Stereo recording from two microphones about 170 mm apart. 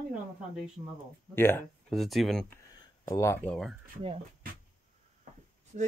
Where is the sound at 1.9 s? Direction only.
Centre (ahead or behind).